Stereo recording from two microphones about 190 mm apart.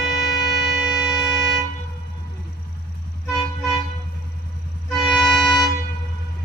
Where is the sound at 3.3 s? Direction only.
Centre (ahead or behind).